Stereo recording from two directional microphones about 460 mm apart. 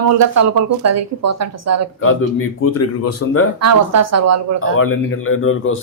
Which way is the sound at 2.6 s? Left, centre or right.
Left.